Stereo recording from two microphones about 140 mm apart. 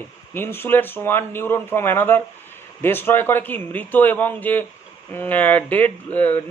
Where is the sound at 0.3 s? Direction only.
15° left (ahead or behind).